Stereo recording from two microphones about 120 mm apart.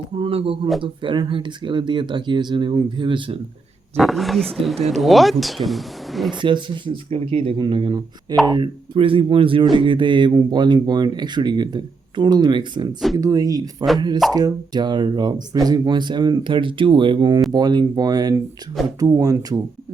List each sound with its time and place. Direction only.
0.2 s speech: 50° right (ahead or behind)
3.9 s speech: centre (ahead or behind)
6.4 s speech: 40° right (ahead or behind)